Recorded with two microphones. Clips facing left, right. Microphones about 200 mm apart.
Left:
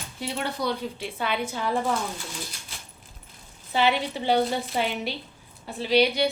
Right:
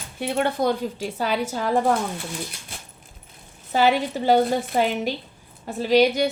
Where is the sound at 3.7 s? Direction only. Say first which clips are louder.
Right 4 dB; 45° right (ahead or behind).